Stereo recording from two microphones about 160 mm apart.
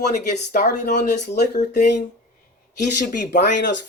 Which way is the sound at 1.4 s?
90° left.